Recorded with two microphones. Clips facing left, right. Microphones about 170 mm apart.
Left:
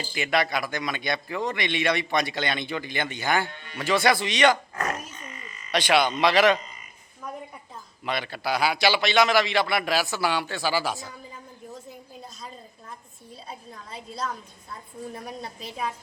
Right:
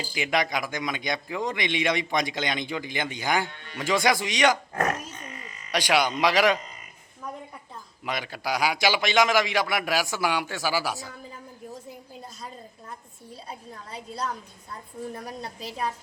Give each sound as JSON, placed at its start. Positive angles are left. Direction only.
{"t": 0.0, "sound": "speech", "side_deg": -15}
{"t": 4.7, "sound": "grunt", "side_deg": -55}
{"t": 5.7, "sound": "speech", "side_deg": -10}
{"t": 8.0, "sound": "speech", "side_deg": -10}
{"t": 15.1, "sound": "a woman's voice", "side_deg": 5}